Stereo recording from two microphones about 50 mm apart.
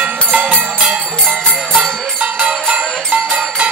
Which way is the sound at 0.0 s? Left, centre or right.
Right.